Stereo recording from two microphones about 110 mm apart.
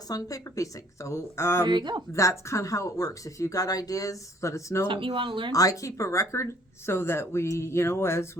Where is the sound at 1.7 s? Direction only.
40° right (ahead or behind).